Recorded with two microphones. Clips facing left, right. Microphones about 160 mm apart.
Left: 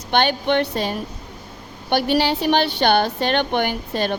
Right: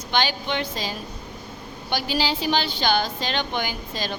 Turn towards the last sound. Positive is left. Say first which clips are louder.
# left 7 dB
turn(degrees=60)  # may be behind; listen again after turning